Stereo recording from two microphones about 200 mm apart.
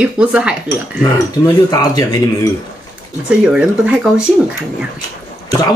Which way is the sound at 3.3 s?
5° right (ahead or behind).